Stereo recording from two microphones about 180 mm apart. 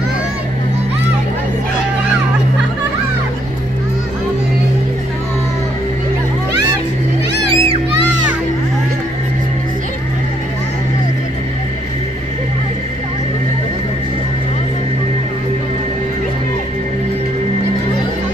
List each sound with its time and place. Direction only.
7.5 s music: 30° right (ahead or behind)